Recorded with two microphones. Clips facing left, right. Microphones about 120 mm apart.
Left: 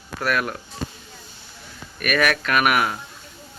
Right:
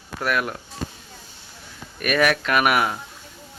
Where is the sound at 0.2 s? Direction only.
20° right (ahead or behind).